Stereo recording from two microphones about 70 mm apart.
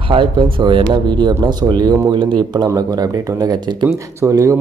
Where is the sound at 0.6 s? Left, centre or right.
Right.